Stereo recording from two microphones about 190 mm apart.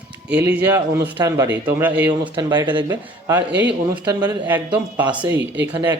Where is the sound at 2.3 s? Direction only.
25° right (ahead or behind).